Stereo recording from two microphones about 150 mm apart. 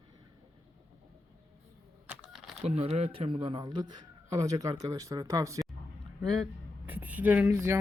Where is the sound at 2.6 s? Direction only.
45° right (ahead or behind); by 5.6 s 20° right (ahead or behind).